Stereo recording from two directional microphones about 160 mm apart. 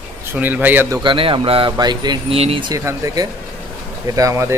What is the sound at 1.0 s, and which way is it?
Speech, 30° right (ahead or behind).